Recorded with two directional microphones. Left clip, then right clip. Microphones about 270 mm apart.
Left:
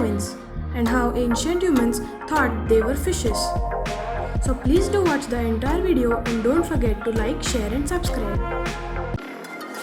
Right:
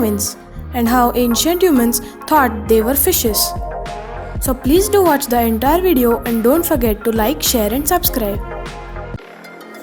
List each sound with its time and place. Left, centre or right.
0.0 s a woman's voice: right
4.4 s a woman's voice: right